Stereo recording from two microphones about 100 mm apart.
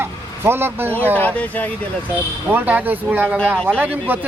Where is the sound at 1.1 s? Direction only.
15° left (ahead or behind).